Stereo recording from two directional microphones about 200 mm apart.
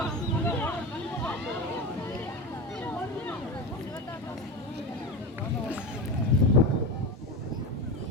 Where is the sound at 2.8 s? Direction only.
10° left (ahead or behind).